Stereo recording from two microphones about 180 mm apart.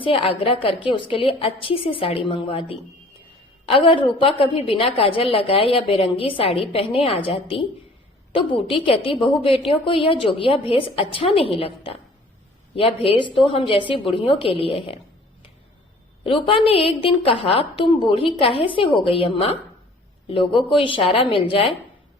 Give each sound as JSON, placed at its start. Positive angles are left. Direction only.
{"t": 0.0, "sound": "a woman's voice", "side_deg": 30}
{"t": 16.2, "sound": "a woman's voice", "side_deg": 30}